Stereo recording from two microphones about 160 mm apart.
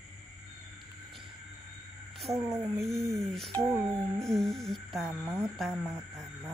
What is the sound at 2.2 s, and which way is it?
A woman's voice, centre (ahead or behind).